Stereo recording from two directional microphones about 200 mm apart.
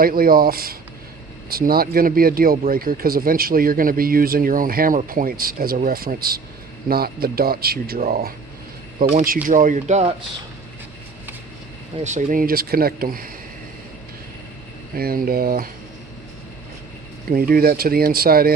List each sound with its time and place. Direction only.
0.0 s speech: 45° right (ahead or behind)
12.0 s speech: 40° right (ahead or behind)
14.9 s speech: 45° right (ahead or behind)
17.2 s speech: 45° right (ahead or behind)